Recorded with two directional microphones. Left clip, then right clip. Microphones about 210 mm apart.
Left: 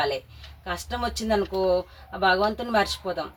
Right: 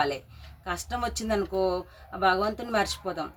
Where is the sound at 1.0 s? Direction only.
60° right (ahead or behind).